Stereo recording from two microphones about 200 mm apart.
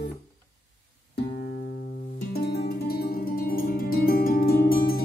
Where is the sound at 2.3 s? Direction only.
55° left (ahead or behind).